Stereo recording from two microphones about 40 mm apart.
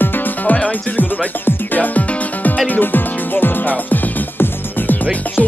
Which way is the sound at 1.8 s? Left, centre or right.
Left.